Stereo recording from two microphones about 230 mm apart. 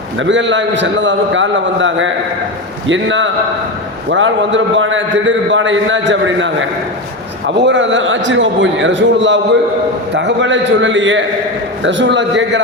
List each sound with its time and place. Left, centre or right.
0.2 s a man's voice: right